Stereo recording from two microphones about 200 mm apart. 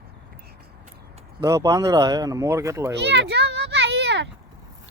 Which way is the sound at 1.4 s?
15° right (ahead or behind).